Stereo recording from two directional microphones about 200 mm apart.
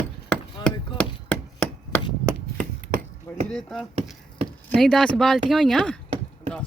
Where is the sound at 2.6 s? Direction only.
40° right (ahead or behind).